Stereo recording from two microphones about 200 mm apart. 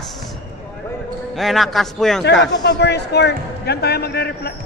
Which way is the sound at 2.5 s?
60° left (ahead or behind).